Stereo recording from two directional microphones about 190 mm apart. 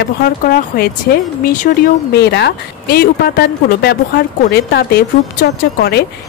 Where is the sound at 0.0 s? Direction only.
55° left (ahead or behind).